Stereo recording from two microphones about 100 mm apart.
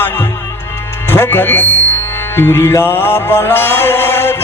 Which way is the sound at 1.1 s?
25° left (ahead or behind).